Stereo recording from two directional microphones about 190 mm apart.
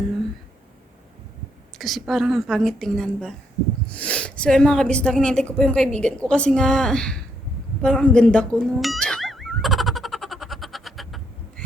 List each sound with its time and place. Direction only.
1.8 s speech: centre (ahead or behind)
7.8 s music: 5° left (ahead or behind)